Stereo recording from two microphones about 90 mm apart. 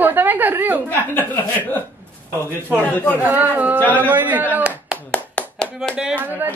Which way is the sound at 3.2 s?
20° right (ahead or behind).